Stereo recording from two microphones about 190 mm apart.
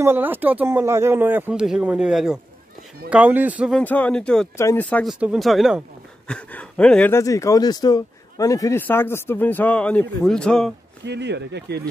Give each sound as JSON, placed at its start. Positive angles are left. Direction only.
{"t": 0.0, "sound": "speech", "side_deg": -10}
{"t": 3.7, "sound": "a man's voice", "side_deg": 10}
{"t": 5.0, "sound": "speech", "side_deg": -5}
{"t": 11.1, "sound": "speech", "side_deg": -65}